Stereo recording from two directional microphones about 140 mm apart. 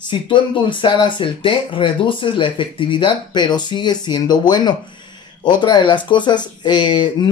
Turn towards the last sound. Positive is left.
turn(degrees=35)  # may be behind; listen again after turning